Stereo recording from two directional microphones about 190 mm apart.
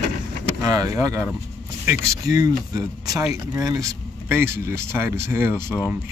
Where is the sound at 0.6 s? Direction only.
20° right (ahead or behind).